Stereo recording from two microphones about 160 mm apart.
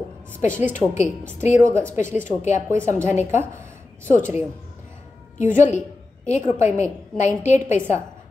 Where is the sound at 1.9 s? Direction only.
50° left (ahead or behind).